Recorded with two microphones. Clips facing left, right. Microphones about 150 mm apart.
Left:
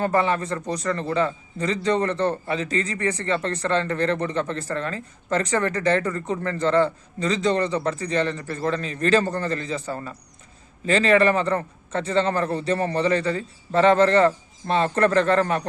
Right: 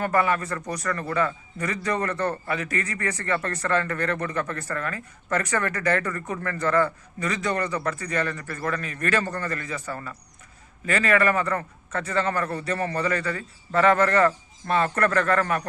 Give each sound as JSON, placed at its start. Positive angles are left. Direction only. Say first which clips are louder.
{"t": 0.0, "sound": "a man's voice", "louder": "left 2 dB", "side_deg": 25}